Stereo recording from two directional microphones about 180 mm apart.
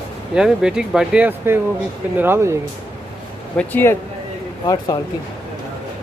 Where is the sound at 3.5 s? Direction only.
10° left (ahead or behind).